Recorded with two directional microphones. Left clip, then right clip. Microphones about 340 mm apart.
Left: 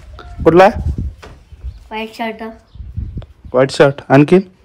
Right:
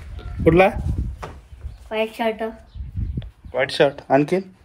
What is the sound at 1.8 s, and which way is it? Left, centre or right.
Speech, centre.